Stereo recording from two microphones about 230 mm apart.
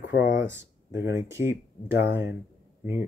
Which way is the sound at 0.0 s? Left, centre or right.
Left.